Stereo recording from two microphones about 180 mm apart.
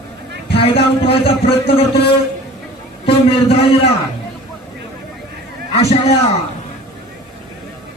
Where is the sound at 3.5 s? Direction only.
35° left (ahead or behind).